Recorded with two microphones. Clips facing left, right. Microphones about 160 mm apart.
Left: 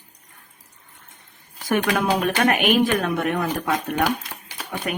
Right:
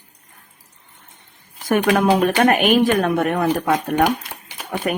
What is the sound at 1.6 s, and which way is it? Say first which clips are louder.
Speech: right 5 dB; 45° right (ahead or behind).